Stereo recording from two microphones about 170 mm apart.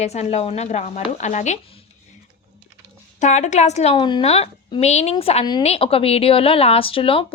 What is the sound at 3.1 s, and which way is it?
A woman's voice, 45° left (ahead or behind).